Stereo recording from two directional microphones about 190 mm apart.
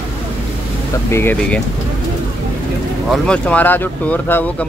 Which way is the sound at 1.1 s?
10° left (ahead or behind).